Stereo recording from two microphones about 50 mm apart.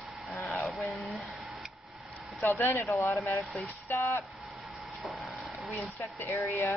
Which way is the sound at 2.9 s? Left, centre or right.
Left.